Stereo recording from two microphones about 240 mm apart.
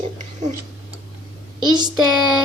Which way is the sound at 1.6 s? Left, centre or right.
Centre.